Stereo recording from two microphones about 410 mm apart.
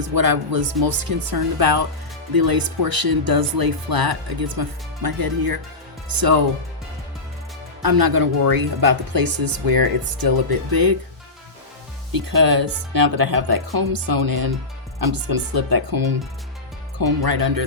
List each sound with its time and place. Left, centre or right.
0.1 s speech: right
7.8 s speech: right
12.1 s speech: right